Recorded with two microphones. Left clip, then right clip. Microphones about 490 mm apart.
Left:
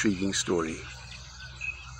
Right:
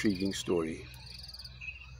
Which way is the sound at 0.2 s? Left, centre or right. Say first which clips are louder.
Left 4 dB; right.